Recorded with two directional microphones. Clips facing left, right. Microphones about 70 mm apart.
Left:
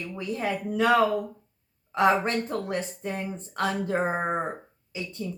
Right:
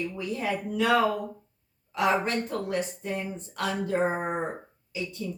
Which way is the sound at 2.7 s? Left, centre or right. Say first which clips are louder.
Right 1 dB; left.